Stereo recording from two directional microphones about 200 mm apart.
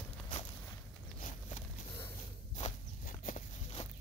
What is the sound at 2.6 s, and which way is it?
Walk, 40° left (ahead or behind).